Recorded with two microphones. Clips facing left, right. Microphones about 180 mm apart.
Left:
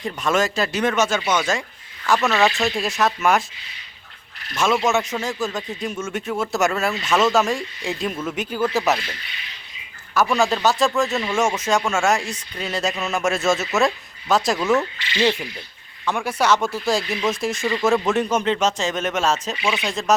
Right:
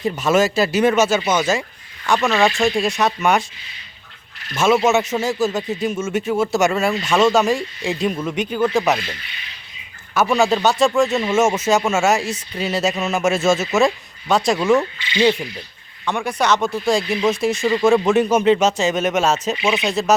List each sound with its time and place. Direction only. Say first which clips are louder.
0.0 s speech: right 4 dB; 5° right (ahead or behind)
4.5 s speech: right 4 dB; 5° right (ahead or behind)
10.3 s speech: right 4 dB; centre (ahead or behind)
11.1 s speech: right 4 dB; 20° right (ahead or behind)
11.5 s speech: right 4 dB; 5° right (ahead or behind)
14.6 s speech: right 3 dB; 15° right (ahead or behind)
15.2 s speech: right 4 dB; 5° right (ahead or behind)
16.0 s speech: right 1 dB; 5° left (ahead or behind)
17.6 s speech: right 5 dB; 15° right (ahead or behind)
17.8 s speech: right 4 dB; centre (ahead or behind)
19.6 s speech: right 4 dB; 20° right (ahead or behind)
19.9 s speech: right 2 dB; 5° right (ahead or behind)